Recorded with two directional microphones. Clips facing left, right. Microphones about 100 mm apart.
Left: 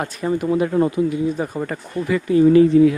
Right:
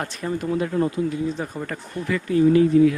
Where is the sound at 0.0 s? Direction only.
10° left (ahead or behind).